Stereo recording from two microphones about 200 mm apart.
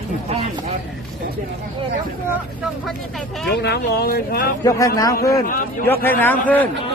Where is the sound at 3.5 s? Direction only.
55° left (ahead or behind).